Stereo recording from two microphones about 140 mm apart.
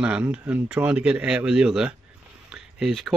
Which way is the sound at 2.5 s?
Centre (ahead or behind).